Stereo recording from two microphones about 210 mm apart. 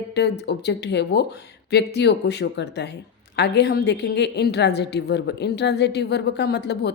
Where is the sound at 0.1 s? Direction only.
50° left (ahead or behind).